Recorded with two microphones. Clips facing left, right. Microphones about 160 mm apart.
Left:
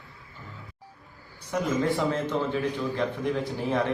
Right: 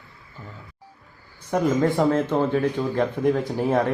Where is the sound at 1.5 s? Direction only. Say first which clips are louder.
Right 5 dB; 50° right (ahead or behind).